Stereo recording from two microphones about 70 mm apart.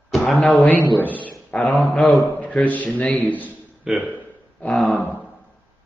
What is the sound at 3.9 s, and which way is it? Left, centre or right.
Speech, centre.